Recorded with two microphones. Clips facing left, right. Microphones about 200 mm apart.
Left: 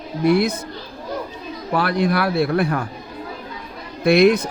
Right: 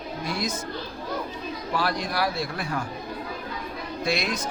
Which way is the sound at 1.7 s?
60° left (ahead or behind).